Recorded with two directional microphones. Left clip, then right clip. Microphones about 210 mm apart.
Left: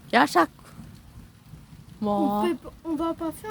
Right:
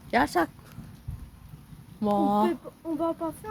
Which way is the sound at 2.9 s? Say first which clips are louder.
Even; 50° left (ahead or behind).